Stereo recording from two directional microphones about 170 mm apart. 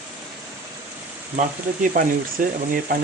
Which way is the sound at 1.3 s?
50° right (ahead or behind).